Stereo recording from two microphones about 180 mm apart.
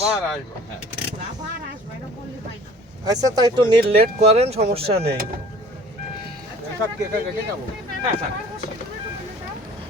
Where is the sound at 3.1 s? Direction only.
20° right (ahead or behind).